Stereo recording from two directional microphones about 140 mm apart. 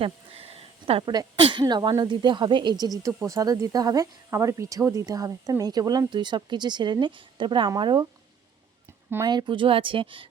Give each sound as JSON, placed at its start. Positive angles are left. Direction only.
{"t": 0.0, "sound": "a sound", "side_deg": -45}
{"t": 1.0, "sound": "a woman's voice", "side_deg": -30}
{"t": 9.2, "sound": "a woman's voice", "side_deg": -30}